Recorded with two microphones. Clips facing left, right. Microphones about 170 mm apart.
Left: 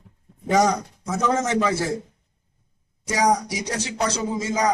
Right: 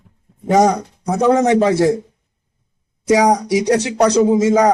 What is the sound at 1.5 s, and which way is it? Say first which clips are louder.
Speech: right 9 dB; 35° right (ahead or behind).